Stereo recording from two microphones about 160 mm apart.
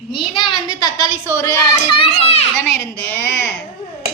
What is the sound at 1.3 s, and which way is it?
Speech, 15° left (ahead or behind).